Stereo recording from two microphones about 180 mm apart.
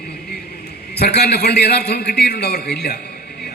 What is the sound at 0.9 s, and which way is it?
A man's voice, 65° left (ahead or behind).